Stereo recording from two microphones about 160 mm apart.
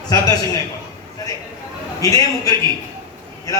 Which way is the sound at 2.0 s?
20° left (ahead or behind).